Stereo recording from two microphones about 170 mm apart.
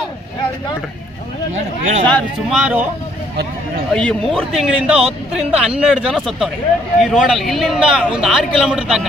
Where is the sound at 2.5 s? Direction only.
10° right (ahead or behind).